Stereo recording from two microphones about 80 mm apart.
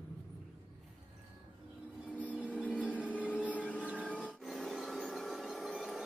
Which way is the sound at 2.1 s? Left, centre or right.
Centre.